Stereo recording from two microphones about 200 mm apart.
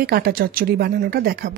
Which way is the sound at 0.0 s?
50° right (ahead or behind).